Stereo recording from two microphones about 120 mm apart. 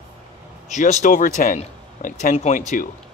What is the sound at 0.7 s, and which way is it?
Speech, 75° left (ahead or behind).